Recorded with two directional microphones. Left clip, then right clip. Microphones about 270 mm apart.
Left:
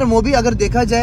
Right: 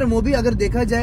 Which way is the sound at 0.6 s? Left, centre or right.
Centre.